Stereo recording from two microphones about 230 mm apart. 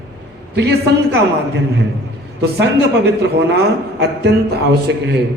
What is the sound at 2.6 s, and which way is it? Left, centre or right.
A man's voice, right.